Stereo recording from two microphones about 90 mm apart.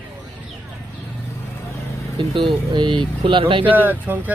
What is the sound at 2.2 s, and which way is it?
A man's voice, 70° right (ahead or behind).